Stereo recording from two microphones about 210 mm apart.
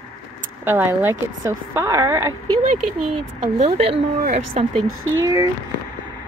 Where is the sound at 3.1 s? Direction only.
25° right (ahead or behind).